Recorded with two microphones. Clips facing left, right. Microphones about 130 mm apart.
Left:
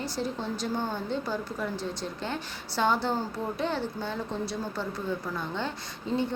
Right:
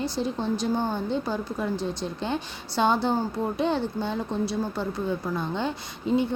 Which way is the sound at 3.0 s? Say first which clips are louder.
Right 4 dB; 15° right (ahead or behind).